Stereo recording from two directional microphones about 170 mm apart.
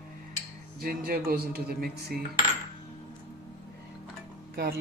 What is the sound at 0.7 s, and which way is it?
A man's voice, 60° right (ahead or behind).